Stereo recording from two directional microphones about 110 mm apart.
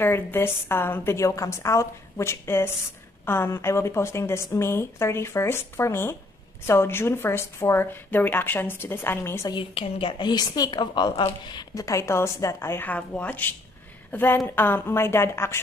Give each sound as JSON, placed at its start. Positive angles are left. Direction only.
{"t": 0.0, "sound": "a woman's voice", "side_deg": 20}
{"t": 9.5, "sound": "a woman's voice", "side_deg": 55}
{"t": 11.8, "sound": "a woman's voice", "side_deg": 25}